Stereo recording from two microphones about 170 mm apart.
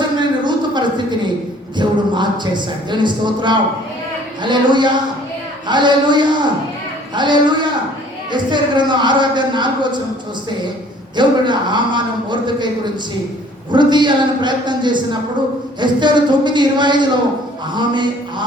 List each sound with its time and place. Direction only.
0.2 s a sound: 25° right (ahead or behind)
1.8 s speech: 25° right (ahead or behind)
11.2 s speech: 25° right (ahead or behind)